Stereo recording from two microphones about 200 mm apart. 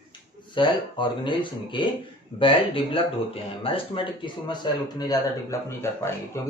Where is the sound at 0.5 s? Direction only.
25° left (ahead or behind).